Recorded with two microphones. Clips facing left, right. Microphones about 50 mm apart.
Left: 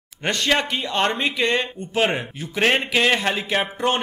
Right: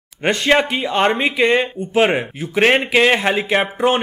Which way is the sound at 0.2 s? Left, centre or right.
Centre.